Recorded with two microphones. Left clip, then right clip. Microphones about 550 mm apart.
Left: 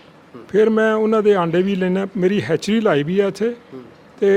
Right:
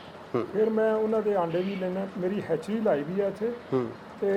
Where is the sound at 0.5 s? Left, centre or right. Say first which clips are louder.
Left 10 dB; left.